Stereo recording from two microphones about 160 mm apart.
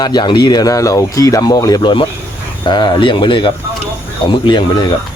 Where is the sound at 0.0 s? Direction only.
25° left (ahead or behind).